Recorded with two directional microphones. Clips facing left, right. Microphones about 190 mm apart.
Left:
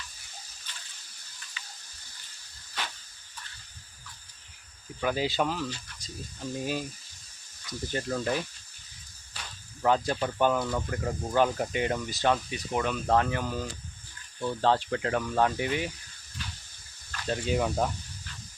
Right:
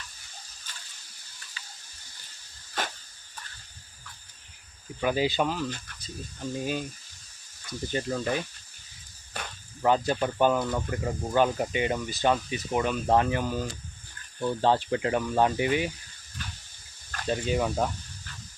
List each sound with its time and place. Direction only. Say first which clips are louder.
0.7 s ratchet: right 1 dB; 45° right (ahead or behind)
1.6 s a sound: even; 35° right (ahead or behind)
2.8 s cricket: right 5 dB; 45° right (ahead or behind)
4.9 s speech: right 2 dB; 5° right (ahead or behind)
7.9 s speech: right 1 dB; centre (ahead or behind)
9.8 s speech: right 2 dB; 5° right (ahead or behind)
16.4 s a sound: right 1 dB; 50° right (ahead or behind)
17.2 s speech: right 1 dB; 5° right (ahead or behind)